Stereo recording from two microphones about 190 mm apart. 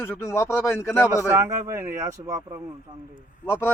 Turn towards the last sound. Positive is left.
turn(degrees=15)  # may be behind; listen again after turning